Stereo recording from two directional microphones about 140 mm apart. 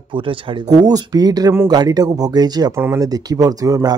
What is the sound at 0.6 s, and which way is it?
Speech, 25° right (ahead or behind).